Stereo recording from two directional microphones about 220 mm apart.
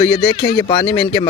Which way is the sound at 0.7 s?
20° left (ahead or behind).